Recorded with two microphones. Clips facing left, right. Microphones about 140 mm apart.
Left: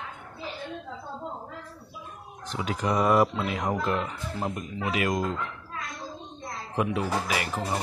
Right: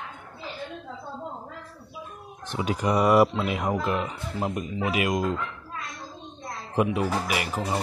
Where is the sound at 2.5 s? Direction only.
20° right (ahead or behind).